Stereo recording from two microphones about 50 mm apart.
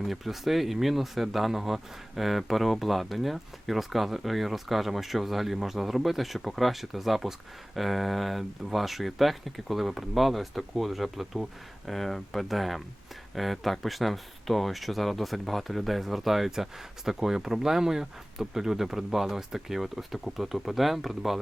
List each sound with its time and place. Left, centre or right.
0.0 s speech: centre